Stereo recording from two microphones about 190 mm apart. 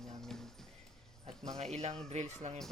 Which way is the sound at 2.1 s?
35° right (ahead or behind).